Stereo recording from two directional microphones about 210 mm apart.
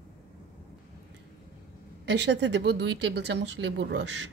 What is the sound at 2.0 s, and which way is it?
Speech, 55° right (ahead or behind).